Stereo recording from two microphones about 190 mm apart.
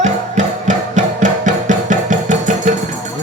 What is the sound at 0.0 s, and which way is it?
Music, 40° right (ahead or behind).